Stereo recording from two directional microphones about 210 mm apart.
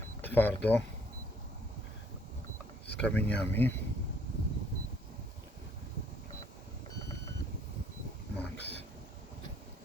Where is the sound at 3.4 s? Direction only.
10° left (ahead or behind).